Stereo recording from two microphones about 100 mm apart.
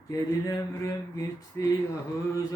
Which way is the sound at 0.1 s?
35° left (ahead or behind).